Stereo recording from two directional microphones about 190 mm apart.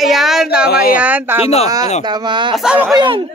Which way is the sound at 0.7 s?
55° left (ahead or behind).